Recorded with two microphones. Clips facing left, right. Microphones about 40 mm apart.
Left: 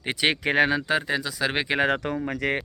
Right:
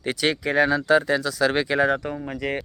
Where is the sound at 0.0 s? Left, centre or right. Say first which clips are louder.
Right 1 dB; centre.